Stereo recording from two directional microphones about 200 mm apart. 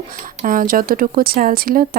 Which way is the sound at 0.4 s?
45° right (ahead or behind).